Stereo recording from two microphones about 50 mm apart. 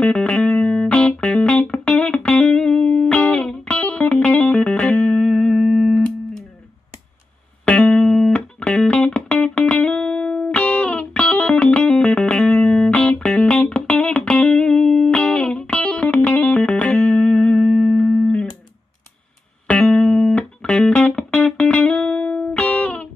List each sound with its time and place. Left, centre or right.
0.0 s music: left; by 6.0 s centre
7.6 s music: left
8.0 s music: centre
8.5 s music: left
13.5 s music: centre
19.7 s music: left